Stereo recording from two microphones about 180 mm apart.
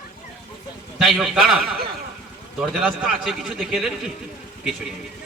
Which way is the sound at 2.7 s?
5° right (ahead or behind).